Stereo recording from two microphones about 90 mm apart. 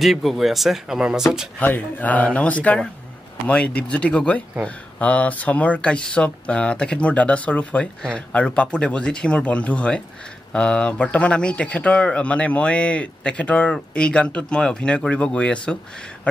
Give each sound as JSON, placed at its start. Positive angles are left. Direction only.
{"t": 0.0, "sound": "speech", "side_deg": 0}
{"t": 1.6, "sound": "speech", "side_deg": 20}